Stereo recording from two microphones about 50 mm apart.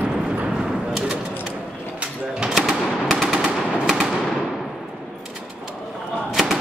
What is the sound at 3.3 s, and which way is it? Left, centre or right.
Machine gun, centre.